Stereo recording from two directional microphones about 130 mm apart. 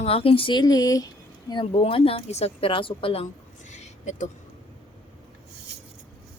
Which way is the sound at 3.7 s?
65° left (ahead or behind).